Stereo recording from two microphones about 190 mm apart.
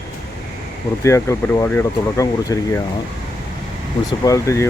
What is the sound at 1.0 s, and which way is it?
Speech, 15° left (ahead or behind).